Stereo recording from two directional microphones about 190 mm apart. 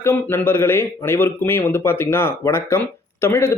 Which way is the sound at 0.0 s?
10° left (ahead or behind).